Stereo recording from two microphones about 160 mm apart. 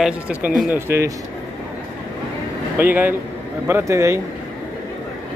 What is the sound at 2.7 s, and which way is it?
Speech, 10° right (ahead or behind).